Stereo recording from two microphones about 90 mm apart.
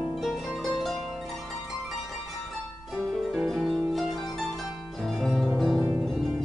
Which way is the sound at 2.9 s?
Centre (ahead or behind).